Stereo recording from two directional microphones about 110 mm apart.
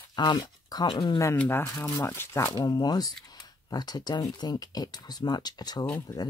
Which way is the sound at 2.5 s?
40° left (ahead or behind).